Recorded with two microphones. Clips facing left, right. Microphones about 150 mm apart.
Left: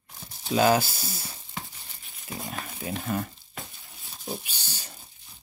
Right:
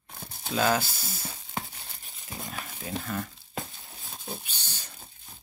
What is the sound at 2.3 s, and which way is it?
Speech, 20° left (ahead or behind).